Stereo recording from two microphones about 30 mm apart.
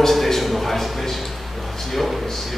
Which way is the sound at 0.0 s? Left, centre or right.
Centre.